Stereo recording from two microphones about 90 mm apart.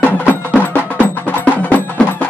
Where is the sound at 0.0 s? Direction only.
15° left (ahead or behind).